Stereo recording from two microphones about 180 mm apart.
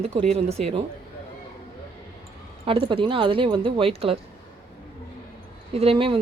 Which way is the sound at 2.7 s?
30° right (ahead or behind).